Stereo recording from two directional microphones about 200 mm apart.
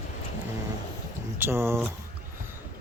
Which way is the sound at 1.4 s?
10° right (ahead or behind).